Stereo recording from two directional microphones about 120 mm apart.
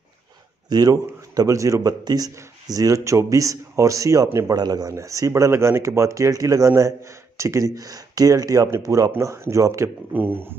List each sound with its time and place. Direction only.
0.7 s speech: 35° right (ahead or behind)
10.1 s speech: 15° right (ahead or behind)